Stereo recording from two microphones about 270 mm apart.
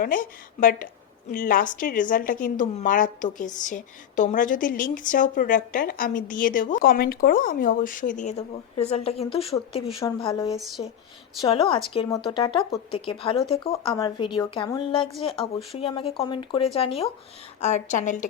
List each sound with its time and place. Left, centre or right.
0.0 s a woman's voice: left